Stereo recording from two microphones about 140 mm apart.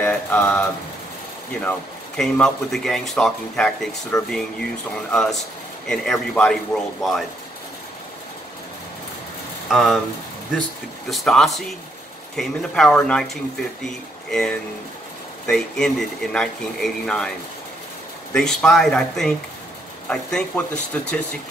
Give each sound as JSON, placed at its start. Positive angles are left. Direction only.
{"t": 0.0, "sound": "mantra", "side_deg": 10}
{"t": 1.6, "sound": "speech", "side_deg": 10}
{"t": 9.7, "sound": "speech", "side_deg": 0}
{"t": 11.1, "sound": "speech", "side_deg": 0}
{"t": 18.3, "sound": "speech", "side_deg": 5}